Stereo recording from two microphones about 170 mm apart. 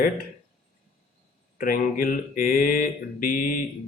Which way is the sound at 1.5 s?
55° left (ahead or behind).